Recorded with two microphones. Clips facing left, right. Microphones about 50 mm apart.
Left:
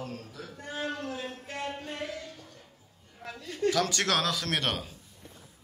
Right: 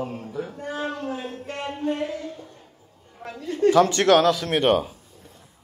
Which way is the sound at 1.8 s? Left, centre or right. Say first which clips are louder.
Right 11 dB; right.